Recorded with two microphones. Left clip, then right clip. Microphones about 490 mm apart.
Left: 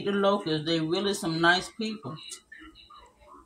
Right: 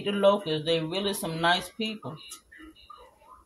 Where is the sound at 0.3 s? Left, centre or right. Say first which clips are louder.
Right 2 dB; right.